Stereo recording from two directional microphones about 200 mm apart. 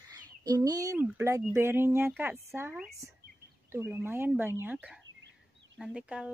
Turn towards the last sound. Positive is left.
turn(degrees=-5)  # may be behind; listen again after turning